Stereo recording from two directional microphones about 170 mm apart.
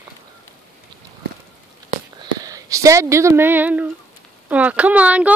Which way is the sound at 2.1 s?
20° right (ahead or behind).